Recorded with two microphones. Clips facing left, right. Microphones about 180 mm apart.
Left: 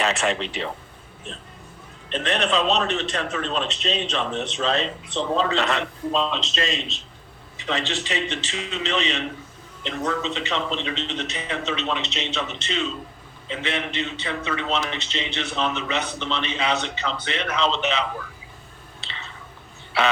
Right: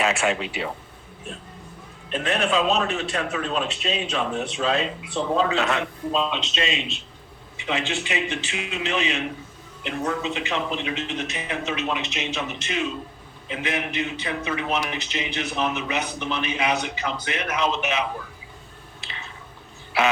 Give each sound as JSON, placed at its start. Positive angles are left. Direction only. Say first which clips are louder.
{"t": 0.0, "sound": "a man's voice", "louder": "even", "side_deg": -5}
{"t": 2.0, "sound": "a man's voice", "louder": "even", "side_deg": -5}
{"t": 12.0, "sound": "a man's voice", "louder": "even", "side_deg": 35}
{"t": 12.3, "sound": "a man's voice", "louder": "left 1 dB", "side_deg": -10}